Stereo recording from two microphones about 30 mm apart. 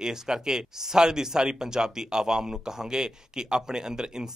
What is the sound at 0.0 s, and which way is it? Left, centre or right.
Speech, right.